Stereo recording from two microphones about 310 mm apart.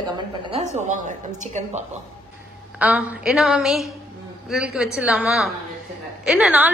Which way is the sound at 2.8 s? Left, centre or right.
Centre.